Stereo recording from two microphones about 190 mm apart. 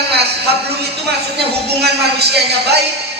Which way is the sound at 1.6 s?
60° right (ahead or behind).